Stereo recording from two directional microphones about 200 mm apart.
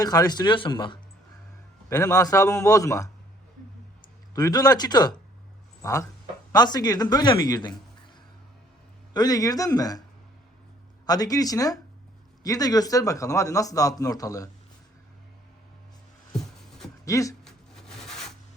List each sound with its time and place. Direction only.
0.0 s a man's voice: 20° left (ahead or behind)
4.4 s speech: 20° left (ahead or behind)
9.1 s speech: 20° left (ahead or behind)
11.0 s a man's voice: 20° left (ahead or behind)
16.4 s a sound: centre (ahead or behind)
17.1 s a man's voice: 15° left (ahead or behind)
17.4 s rub: centre (ahead or behind)